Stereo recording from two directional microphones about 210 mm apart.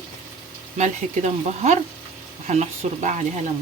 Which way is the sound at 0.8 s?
35° right (ahead or behind).